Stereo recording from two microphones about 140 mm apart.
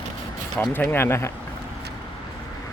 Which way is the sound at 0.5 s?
15° left (ahead or behind).